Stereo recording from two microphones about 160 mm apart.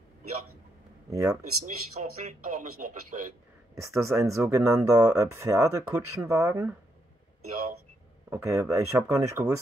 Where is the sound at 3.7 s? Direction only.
20° right (ahead or behind).